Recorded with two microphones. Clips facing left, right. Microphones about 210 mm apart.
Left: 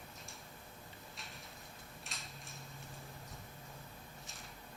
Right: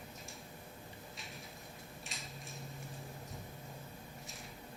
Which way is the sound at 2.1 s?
Centre (ahead or behind).